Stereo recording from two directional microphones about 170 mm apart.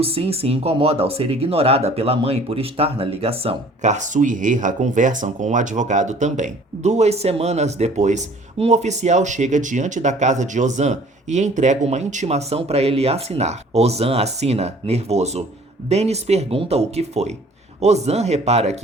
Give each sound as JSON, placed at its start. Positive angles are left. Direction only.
{"t": 0.0, "sound": "speech", "side_deg": -35}